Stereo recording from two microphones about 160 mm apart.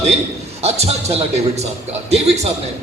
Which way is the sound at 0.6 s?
40° right (ahead or behind).